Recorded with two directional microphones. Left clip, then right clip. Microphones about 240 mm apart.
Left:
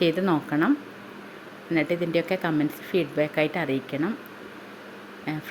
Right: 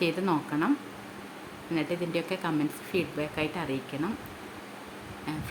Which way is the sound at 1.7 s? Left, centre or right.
Centre.